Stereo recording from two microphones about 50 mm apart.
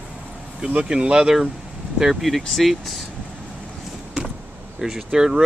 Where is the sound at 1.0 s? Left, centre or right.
Centre.